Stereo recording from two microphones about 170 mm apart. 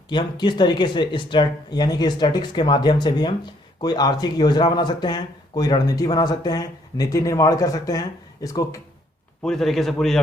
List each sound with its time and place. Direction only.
0.1 s speech: 25° left (ahead or behind)
9.4 s a man's voice: 5° left (ahead or behind)